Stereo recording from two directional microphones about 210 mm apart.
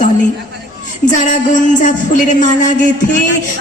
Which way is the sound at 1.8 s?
35° left (ahead or behind).